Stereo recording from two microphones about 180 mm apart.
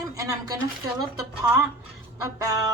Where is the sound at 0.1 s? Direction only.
20° right (ahead or behind).